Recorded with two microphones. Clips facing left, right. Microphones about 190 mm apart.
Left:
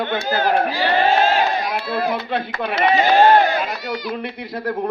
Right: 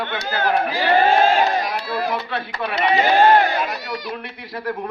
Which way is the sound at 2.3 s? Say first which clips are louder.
Left 3 dB; 50° left (ahead or behind).